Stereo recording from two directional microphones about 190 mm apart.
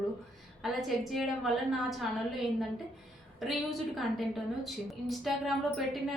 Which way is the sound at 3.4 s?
Centre (ahead or behind).